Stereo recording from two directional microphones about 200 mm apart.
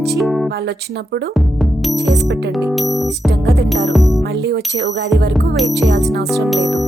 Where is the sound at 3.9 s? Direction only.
Centre (ahead or behind).